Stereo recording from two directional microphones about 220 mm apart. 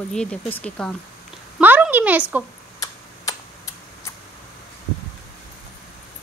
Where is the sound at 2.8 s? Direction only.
15° left (ahead or behind).